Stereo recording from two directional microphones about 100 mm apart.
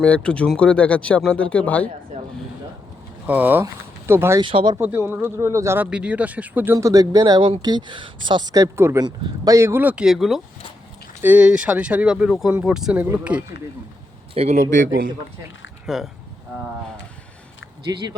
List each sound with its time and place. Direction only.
0.0 s speech: 10° left (ahead or behind)
3.2 s speech: 15° right (ahead or behind)
4.4 s speech: 55° right (ahead or behind)
4.8 s speech: 20° right (ahead or behind)
5.8 s speech: 10° right (ahead or behind)
6.7 s speech: 35° right (ahead or behind)
9.0 s speech: 40° right (ahead or behind)
9.8 s speech: 10° right (ahead or behind)
11.2 s speech: 15° right (ahead or behind)
14.4 s a man's voice: 90° right
15.9 s speech: 5° right (ahead or behind)
17.9 s speech: 35° right (ahead or behind)